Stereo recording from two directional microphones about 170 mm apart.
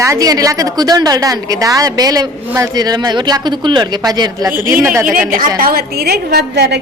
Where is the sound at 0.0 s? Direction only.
20° right (ahead or behind).